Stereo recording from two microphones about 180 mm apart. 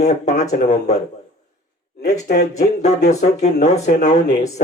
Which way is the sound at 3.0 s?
40° left (ahead or behind).